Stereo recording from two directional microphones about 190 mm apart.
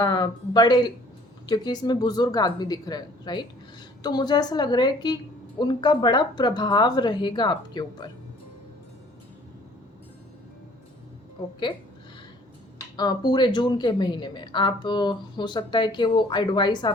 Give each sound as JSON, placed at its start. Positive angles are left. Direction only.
{"t": 0.0, "sound": "a woman's voice", "side_deg": 20}
{"t": 13.0, "sound": "a woman's voice", "side_deg": 20}